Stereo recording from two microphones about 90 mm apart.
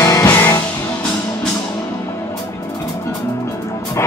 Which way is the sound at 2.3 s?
40° left (ahead or behind).